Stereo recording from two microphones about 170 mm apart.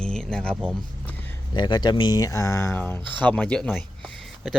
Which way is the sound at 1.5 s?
25° left (ahead or behind).